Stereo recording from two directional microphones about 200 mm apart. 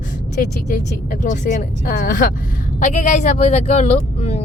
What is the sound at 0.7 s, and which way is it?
Speech, 40° left (ahead or behind).